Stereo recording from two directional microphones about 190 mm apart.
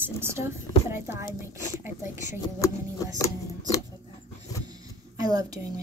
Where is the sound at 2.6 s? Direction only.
15° left (ahead or behind).